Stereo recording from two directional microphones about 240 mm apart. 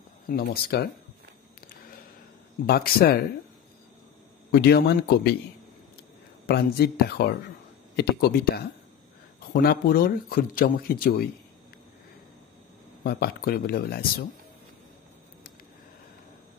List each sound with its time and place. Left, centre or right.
0.3 s speech: left
2.6 s speech: left
4.5 s speech: left
6.4 s speech: left
13.0 s speech: left